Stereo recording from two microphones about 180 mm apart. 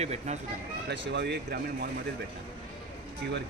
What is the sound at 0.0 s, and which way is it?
Speech, 35° right (ahead or behind).